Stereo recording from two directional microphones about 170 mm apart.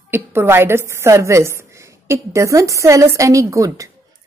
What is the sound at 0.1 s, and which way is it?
A woman's voice, 15° right (ahead or behind).